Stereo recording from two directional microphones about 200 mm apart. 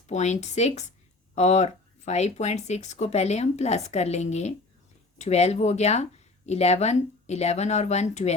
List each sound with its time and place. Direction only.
0.1 s speech: 35° left (ahead or behind)